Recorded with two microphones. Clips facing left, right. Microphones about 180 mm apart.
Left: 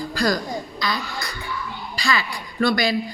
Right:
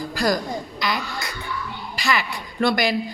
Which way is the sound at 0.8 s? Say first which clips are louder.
Right 1 dB; 20° right (ahead or behind).